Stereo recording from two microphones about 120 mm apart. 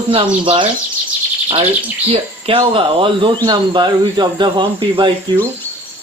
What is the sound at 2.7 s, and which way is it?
Speech, 45° right (ahead or behind).